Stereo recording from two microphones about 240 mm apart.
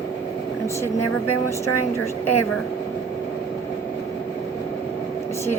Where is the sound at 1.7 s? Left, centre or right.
Left.